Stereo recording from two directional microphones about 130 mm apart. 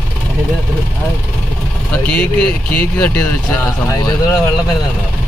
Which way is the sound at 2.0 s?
10° left (ahead or behind).